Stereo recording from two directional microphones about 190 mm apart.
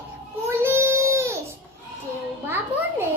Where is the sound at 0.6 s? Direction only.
15° right (ahead or behind).